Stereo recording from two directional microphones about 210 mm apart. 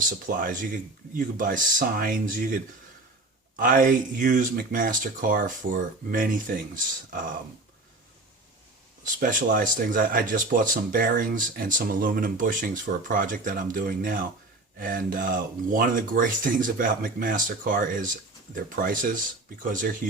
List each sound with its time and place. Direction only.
0.3 s speech: 40° right (ahead or behind)
3.6 s speech: 40° right (ahead or behind)
9.2 s speech: 40° right (ahead or behind)